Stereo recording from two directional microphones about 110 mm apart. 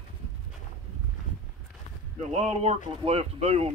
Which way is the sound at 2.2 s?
70° right (ahead or behind).